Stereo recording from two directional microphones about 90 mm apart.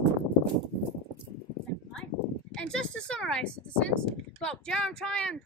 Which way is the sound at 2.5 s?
10° left (ahead or behind).